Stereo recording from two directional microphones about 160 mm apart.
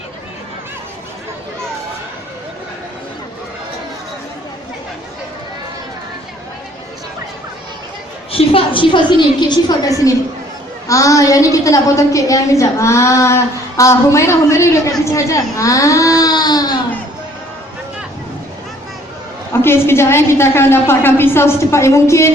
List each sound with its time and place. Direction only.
8.3 s a woman's voice: 35° left (ahead or behind)
10.8 s a woman's voice: 20° left (ahead or behind)
19.6 s a woman's voice: 15° left (ahead or behind)